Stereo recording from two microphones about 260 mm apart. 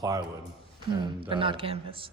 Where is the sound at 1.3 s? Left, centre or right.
Centre.